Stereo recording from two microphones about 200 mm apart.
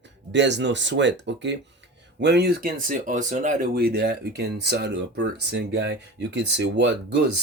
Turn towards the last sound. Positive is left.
turn(degrees=-60)  # may be behind; listen again after turning